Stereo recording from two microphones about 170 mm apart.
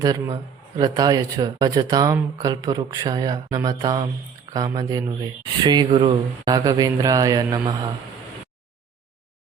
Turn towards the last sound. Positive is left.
turn(degrees=-25)  # may be behind; listen again after turning